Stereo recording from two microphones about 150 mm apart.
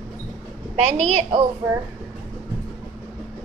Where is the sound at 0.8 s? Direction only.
45° right (ahead or behind).